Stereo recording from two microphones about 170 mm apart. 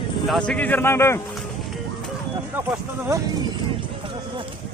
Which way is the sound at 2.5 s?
15° right (ahead or behind).